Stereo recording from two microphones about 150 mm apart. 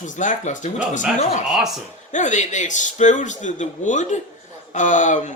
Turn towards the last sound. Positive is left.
turn(degrees=55)  # may be behind; listen again after turning